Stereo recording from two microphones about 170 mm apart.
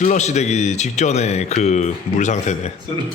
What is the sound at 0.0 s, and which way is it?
Speech, 45° left (ahead or behind).